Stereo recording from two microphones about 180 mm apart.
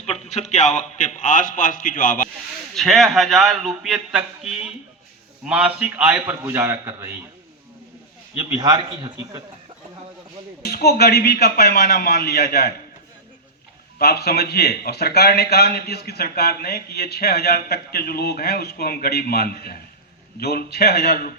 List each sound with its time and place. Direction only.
0.0 s a man's voice: 40° left (ahead or behind)
2.7 s a man's voice: centre (ahead or behind)
8.4 s a man's voice: 20° right (ahead or behind)
10.7 s a man's voice: 60° left (ahead or behind)
14.0 s a man's voice: 60° left (ahead or behind)